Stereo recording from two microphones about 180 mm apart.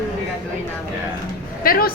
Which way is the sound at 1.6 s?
50° left (ahead or behind).